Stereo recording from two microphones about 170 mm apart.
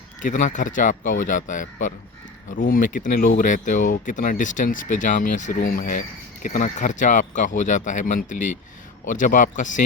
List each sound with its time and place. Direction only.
0.2 s speech: 45° left (ahead or behind)